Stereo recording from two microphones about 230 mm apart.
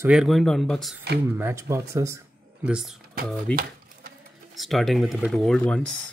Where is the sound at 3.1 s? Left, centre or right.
Right.